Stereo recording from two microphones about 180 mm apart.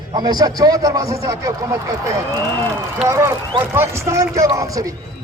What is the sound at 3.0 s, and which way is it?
Speech, 15° right (ahead or behind).